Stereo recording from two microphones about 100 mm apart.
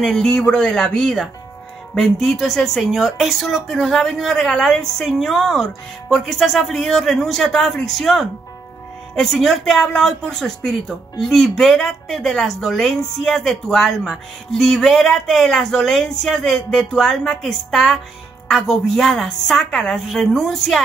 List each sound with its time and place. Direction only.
0.0 s speech: 5° left (ahead or behind)